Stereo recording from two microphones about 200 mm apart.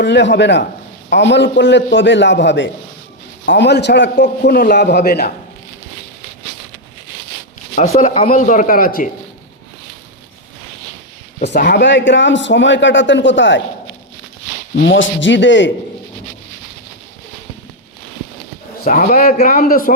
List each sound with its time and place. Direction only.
0.0 s a man's voice: 60° left (ahead or behind)
7.8 s a man's voice: 35° left (ahead or behind)
11.4 s a man's voice: 55° left (ahead or behind)
14.8 s a man's voice: 65° left (ahead or behind)
18.9 s a man's voice: 40° left (ahead or behind)